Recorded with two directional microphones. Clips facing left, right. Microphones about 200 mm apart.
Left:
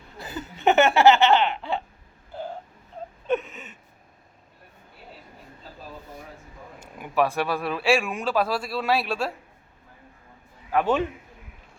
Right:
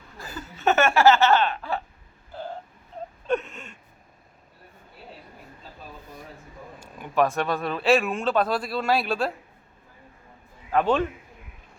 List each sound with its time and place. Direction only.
0.2 s laughter: 20° left (ahead or behind)
3.4 s a sound: 5° left (ahead or behind)
7.0 s speech: 5° left (ahead or behind)
10.7 s laughter: 5° left (ahead or behind)